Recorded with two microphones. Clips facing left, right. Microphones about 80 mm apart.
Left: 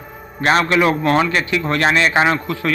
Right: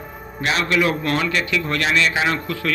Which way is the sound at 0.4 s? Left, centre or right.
Left.